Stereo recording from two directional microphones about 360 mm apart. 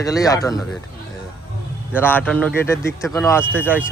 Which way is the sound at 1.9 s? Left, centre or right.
Centre.